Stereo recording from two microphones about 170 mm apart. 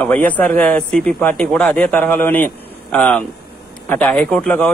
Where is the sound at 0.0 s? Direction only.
10° left (ahead or behind).